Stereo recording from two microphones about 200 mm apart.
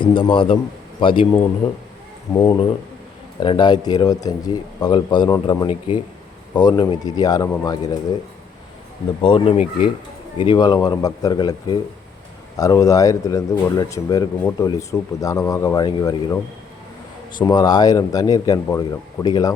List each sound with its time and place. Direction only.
0.0 s speech: 25° left (ahead or behind)
2.3 s speech: 10° left (ahead or behind)
3.4 s speech: 25° left (ahead or behind)
9.2 s speech: 30° left (ahead or behind)
17.4 s speech: 20° left (ahead or behind)